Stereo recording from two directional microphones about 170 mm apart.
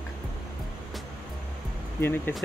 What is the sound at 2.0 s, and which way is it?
Speech, 15° left (ahead or behind).